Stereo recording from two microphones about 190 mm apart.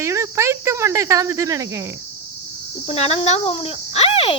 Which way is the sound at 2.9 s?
35° left (ahead or behind).